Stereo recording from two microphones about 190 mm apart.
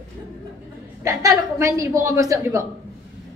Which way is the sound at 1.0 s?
15° right (ahead or behind).